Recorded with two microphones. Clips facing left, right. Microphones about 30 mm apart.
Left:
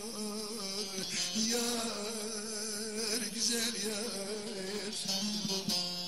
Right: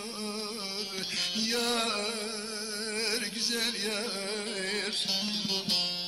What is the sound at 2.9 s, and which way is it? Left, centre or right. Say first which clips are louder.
Music: right 5 dB; right.